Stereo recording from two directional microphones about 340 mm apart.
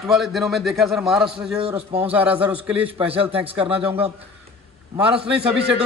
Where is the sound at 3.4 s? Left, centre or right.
Centre.